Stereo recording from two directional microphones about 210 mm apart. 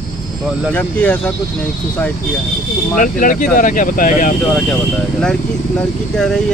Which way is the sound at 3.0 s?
40° left (ahead or behind).